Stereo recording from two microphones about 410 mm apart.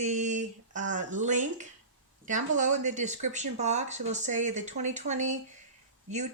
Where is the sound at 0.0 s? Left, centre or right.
Centre.